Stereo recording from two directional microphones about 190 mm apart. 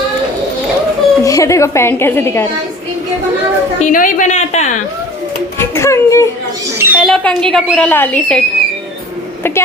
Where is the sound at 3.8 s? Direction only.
45° left (ahead or behind).